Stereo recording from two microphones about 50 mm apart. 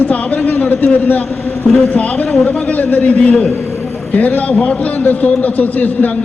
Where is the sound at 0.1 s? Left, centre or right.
Left.